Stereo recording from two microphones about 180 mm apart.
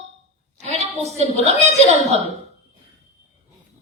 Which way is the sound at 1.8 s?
40° left (ahead or behind).